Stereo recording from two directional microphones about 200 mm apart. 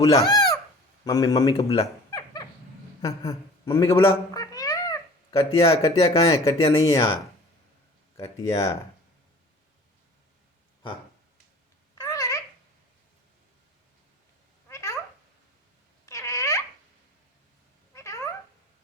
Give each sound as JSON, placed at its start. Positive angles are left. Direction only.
{"t": 0.0, "sound": "a sound", "side_deg": 15}
{"t": 1.0, "sound": "speech", "side_deg": 15}
{"t": 3.0, "sound": "cat", "side_deg": 15}
{"t": 5.6, "sound": "speech", "side_deg": 20}
{"t": 6.6, "sound": "speech", "side_deg": 30}
{"t": 6.8, "sound": "speech", "side_deg": 20}
{"t": 8.1, "sound": "speech", "side_deg": 15}
{"t": 12.0, "sound": "babbling", "side_deg": 15}
{"t": 14.7, "sound": "cat", "side_deg": 15}
{"t": 16.0, "sound": "babbling", "side_deg": 15}
{"t": 17.9, "sound": "cat", "side_deg": 15}